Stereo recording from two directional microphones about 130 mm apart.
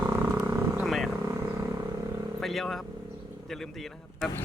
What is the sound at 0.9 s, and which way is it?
Vehicle, centre (ahead or behind).